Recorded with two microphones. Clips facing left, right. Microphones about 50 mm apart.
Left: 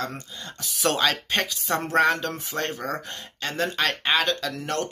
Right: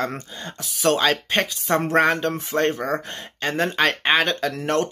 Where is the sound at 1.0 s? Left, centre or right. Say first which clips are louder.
Right 3 dB; centre.